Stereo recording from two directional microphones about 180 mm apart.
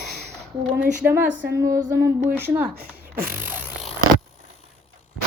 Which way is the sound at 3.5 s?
10° right (ahead or behind).